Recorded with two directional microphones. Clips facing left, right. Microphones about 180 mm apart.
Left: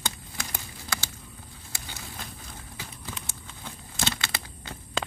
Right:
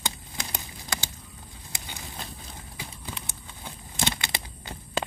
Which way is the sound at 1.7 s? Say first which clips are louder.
Right 1 dB; 15° right (ahead or behind).